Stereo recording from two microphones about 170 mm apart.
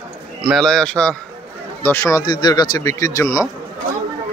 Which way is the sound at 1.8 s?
15° left (ahead or behind).